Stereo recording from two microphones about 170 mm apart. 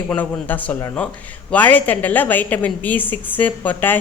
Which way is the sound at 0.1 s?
10° left (ahead or behind).